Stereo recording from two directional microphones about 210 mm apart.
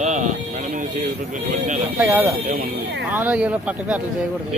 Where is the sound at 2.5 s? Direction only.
50° right (ahead or behind).